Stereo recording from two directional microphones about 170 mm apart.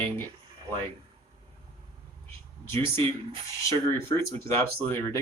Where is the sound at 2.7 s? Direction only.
15° left (ahead or behind).